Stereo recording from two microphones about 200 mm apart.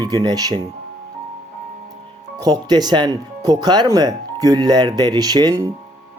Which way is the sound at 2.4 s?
20° right (ahead or behind).